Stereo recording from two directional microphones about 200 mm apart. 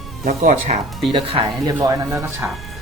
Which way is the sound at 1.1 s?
25° right (ahead or behind).